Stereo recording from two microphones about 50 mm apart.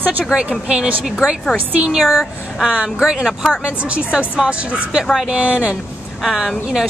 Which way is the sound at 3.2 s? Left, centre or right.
Centre.